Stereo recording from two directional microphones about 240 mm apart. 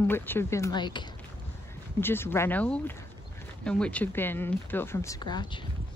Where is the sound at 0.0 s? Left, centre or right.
Centre.